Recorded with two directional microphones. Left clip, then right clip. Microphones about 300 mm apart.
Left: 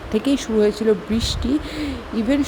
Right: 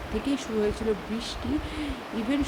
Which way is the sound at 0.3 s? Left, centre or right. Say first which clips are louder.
Left 9 dB; centre.